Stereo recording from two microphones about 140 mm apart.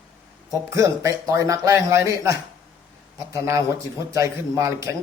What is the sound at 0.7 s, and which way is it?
Speech, 20° right (ahead or behind).